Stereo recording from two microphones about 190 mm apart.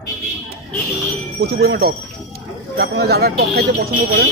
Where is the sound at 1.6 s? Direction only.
55° right (ahead or behind).